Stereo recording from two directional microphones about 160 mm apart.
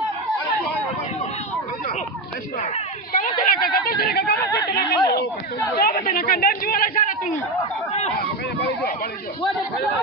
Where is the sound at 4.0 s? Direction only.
75° left (ahead or behind).